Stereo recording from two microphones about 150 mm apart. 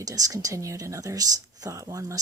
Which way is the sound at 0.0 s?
25° right (ahead or behind).